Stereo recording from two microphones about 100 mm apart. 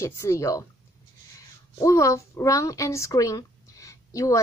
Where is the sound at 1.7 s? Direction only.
30° left (ahead or behind).